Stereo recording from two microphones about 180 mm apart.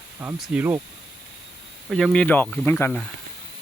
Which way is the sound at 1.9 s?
5° left (ahead or behind).